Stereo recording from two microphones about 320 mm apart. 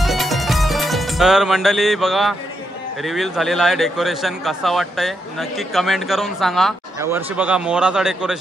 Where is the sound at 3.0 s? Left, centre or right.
Centre.